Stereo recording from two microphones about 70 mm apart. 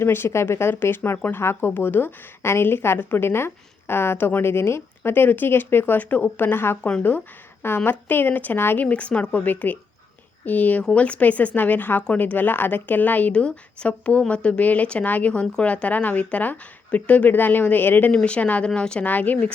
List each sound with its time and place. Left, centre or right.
0.0 s speech: left
7.9 s a woman's voice: left
8.9 s a woman's voice: centre
18.1 s a woman's voice: centre